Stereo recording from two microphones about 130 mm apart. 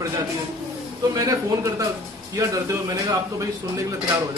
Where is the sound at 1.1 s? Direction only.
25° right (ahead or behind).